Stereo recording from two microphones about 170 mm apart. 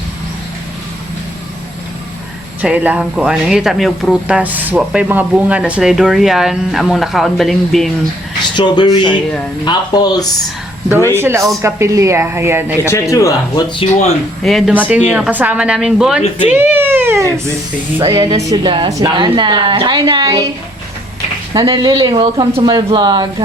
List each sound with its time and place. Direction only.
2.6 s speech: 10° right (ahead or behind)
8.5 s speech: 25° left (ahead or behind)
11.1 s speech: 15° right (ahead or behind)
12.8 s speech: 15° left (ahead or behind)
13.7 s speech: 40° left (ahead or behind)
14.4 s a woman's voice: centre (ahead or behind); by 20.4 s 25° right (ahead or behind)
21.5 s a woman's voice: 25° right (ahead or behind)